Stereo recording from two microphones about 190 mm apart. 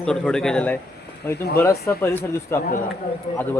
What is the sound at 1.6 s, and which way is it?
A man's voice, 10° left (ahead or behind).